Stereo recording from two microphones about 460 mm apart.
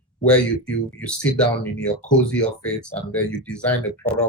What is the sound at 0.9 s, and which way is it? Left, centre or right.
Speech, centre.